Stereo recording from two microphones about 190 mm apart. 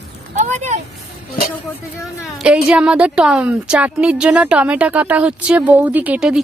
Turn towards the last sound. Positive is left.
turn(degrees=-5)  # may be behind; listen again after turning